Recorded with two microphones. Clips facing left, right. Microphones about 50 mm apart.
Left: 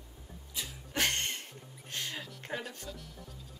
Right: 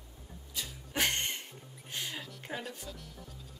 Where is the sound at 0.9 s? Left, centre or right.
Centre.